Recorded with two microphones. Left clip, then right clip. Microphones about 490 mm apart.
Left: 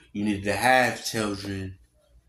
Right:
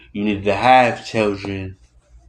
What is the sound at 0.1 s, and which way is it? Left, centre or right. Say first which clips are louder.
Speech: right 8 dB; left.